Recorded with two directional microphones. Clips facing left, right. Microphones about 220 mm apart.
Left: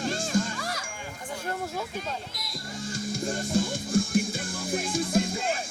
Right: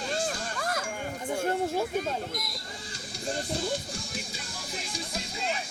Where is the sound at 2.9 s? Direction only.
50° left (ahead or behind).